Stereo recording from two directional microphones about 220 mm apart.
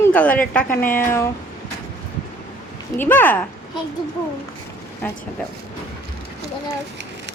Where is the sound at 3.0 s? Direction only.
10° left (ahead or behind).